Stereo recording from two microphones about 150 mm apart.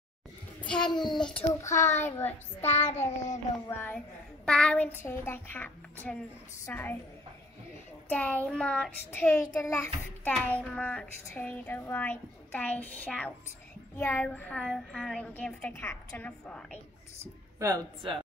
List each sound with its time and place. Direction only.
0.7 s a child's voice: 5° left (ahead or behind)
0.9 s a child's voice: 30° left (ahead or behind)
1.6 s a child's voice: 20° left (ahead or behind)
2.0 s child singing: 15° left (ahead or behind)
3.1 s child singing: 50° left (ahead or behind)
3.6 s child singing: 15° left (ahead or behind)
8.1 s child singing: 10° left (ahead or behind)
17.2 s speech: 20° right (ahead or behind)